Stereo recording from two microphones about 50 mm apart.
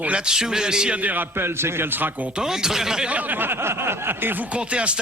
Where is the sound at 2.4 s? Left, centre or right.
Centre.